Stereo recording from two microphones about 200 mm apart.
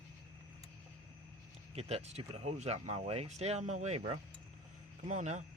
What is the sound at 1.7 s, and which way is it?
Speech, 30° right (ahead or behind).